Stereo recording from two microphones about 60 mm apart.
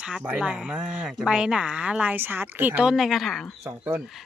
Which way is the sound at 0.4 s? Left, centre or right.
Centre.